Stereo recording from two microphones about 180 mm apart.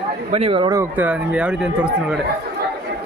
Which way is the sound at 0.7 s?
10° right (ahead or behind).